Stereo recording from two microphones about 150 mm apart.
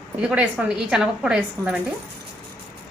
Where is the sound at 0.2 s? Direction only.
10° right (ahead or behind).